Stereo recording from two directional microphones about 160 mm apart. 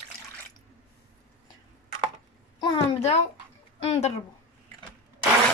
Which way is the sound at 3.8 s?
40° left (ahead or behind).